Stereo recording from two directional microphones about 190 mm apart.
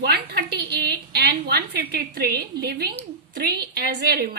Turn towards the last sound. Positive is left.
turn(degrees=-55)  # may be behind; listen again after turning